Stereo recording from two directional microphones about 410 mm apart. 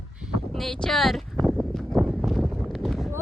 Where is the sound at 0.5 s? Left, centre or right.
Centre.